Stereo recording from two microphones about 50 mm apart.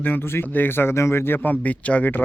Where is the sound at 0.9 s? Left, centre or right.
Left.